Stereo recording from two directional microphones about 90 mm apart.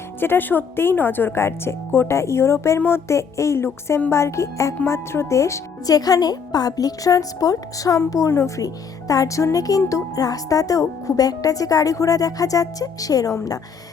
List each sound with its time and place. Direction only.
0.2 s a woman's voice: 25° left (ahead or behind); by 13.6 s 40° left (ahead or behind)